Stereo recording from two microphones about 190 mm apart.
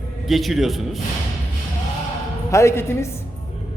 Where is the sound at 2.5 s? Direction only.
15° left (ahead or behind).